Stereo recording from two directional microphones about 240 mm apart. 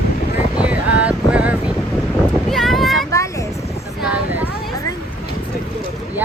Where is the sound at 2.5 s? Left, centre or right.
Centre.